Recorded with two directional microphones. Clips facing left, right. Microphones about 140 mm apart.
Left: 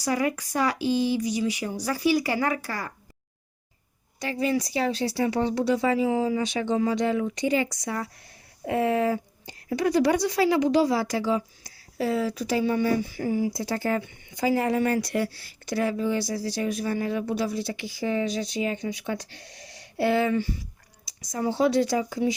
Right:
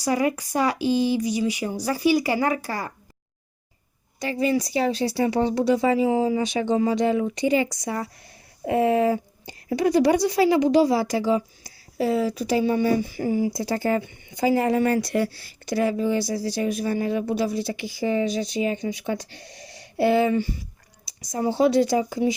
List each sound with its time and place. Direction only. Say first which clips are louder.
0.1 s speech: right 3 dB; 20° right (ahead or behind)
4.2 s speech: right 3 dB; 5° right (ahead or behind)
5.2 s speech: right 3 dB; 15° right (ahead or behind)
10.2 s speech: right 3 dB; 10° right (ahead or behind); by 15.3 s 35° right (ahead or behind)
15.6 s speech: right 3 dB; 20° right (ahead or behind)
21.6 s speech: right 3 dB; 15° right (ahead or behind)